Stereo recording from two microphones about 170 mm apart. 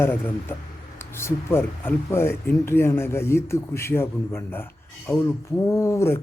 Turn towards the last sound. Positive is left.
turn(degrees=15)  # may be behind; listen again after turning